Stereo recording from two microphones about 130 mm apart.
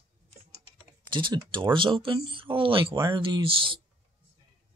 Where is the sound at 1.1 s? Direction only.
40° right (ahead or behind).